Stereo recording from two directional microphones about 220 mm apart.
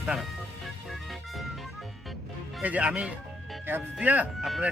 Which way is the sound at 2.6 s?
5° right (ahead or behind).